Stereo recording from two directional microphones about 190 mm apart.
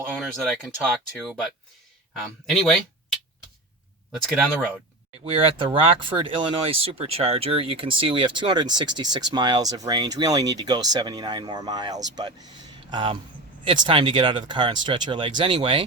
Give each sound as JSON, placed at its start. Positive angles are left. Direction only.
{"t": 0.2, "sound": "speech", "side_deg": 0}
{"t": 5.2, "sound": "speech", "side_deg": -30}